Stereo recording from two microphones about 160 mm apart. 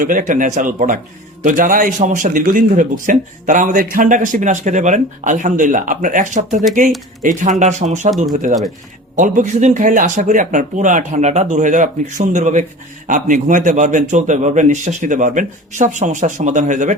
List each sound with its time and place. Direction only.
0.0 s a man's voice: 55° right (ahead or behind)